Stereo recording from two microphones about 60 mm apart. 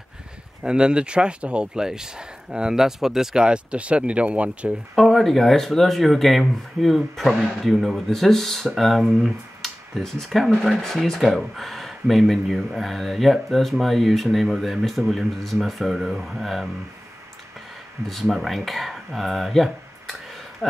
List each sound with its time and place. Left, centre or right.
0.7 s speech: centre
4.9 s speech: centre
18.0 s speech: centre